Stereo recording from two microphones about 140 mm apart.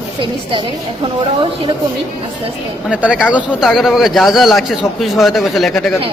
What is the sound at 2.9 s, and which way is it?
Speech, 10° right (ahead or behind).